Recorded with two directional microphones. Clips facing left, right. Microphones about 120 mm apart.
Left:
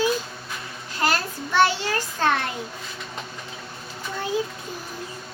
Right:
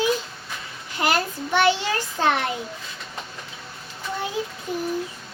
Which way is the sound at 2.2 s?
15° right (ahead or behind).